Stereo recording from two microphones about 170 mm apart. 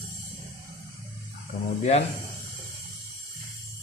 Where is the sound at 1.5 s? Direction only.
50° left (ahead or behind).